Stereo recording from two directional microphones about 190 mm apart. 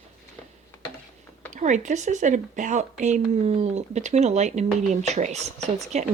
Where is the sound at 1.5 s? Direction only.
40° right (ahead or behind).